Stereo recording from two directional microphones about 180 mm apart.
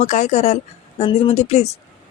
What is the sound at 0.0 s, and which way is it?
A woman's voice, 40° left (ahead or behind).